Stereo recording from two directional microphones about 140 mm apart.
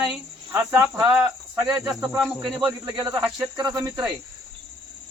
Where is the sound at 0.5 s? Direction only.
15° right (ahead or behind).